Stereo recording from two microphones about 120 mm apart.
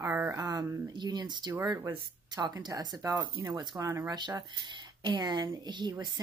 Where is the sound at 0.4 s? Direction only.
30° right (ahead or behind).